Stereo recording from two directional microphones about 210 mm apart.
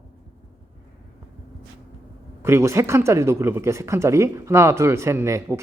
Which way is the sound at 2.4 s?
15° right (ahead or behind).